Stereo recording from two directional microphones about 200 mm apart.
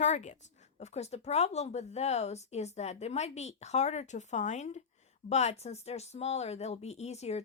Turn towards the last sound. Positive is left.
turn(degrees=35)  # may be behind; listen again after turning